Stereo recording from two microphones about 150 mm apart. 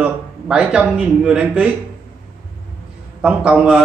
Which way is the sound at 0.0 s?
5° right (ahead or behind).